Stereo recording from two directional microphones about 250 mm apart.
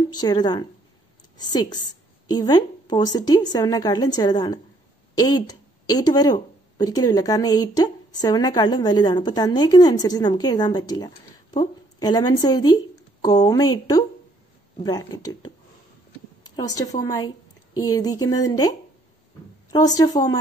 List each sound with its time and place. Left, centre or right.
0.1 s a woman's voice: centre
16.5 s a woman's voice: centre